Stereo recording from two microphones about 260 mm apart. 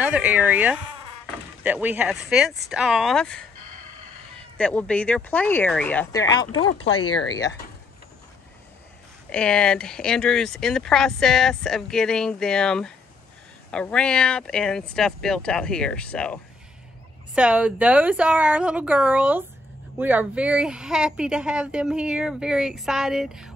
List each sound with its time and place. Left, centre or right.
0.0 s speech: centre
4.6 s speech: centre
7.2 s speech: centre
9.3 s speech: centre
17.4 s speech: centre